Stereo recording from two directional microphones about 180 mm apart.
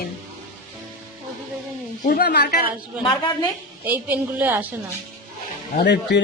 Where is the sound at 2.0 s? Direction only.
60° left (ahead or behind).